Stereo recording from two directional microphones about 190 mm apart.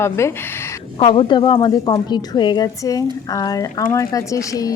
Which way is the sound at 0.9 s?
30° left (ahead or behind).